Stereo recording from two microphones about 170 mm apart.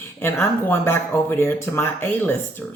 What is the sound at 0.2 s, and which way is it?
Speech, 15° left (ahead or behind).